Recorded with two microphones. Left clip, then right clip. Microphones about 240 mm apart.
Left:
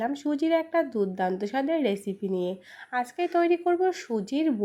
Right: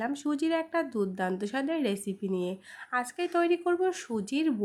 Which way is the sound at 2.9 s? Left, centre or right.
Centre.